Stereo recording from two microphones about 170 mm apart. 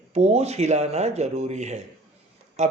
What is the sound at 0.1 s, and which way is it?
Speech, 40° right (ahead or behind).